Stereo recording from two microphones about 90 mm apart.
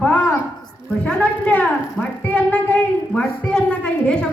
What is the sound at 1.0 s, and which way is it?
A woman's voice, 15° left (ahead or behind).